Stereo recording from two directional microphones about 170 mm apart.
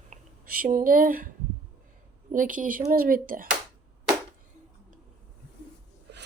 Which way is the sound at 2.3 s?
50° right (ahead or behind).